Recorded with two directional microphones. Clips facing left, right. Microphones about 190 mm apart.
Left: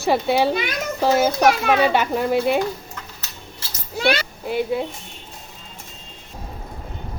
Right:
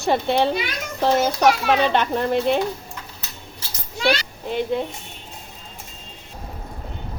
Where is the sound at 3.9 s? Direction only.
60° left (ahead or behind).